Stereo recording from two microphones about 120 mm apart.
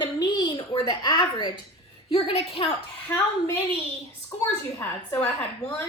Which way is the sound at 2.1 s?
55° left (ahead or behind).